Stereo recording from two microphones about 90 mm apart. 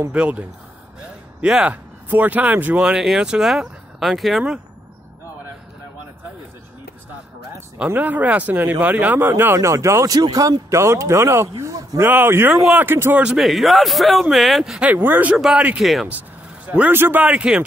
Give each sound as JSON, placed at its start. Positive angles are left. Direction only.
{"t": 0.1, "sound": "speech", "side_deg": -15}
{"t": 7.8, "sound": "speech", "side_deg": -20}
{"t": 12.0, "sound": "speech", "side_deg": -25}
{"t": 13.2, "sound": "a man's voice", "side_deg": -5}
{"t": 14.9, "sound": "speech", "side_deg": -20}
{"t": 15.3, "sound": "a man's voice", "side_deg": -5}
{"t": 16.6, "sound": "speech", "side_deg": -15}